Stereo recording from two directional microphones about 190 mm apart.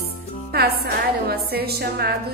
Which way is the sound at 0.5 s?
55° right (ahead or behind).